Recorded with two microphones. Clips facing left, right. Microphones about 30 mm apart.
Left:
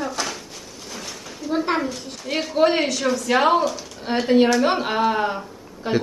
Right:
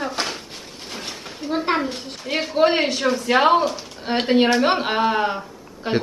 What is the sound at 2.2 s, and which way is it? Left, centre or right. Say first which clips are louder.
Speech: right 1 dB; right.